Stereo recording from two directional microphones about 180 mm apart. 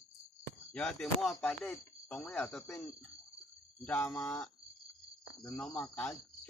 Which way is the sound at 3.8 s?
10° left (ahead or behind).